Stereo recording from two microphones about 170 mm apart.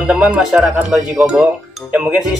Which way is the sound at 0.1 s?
5° right (ahead or behind).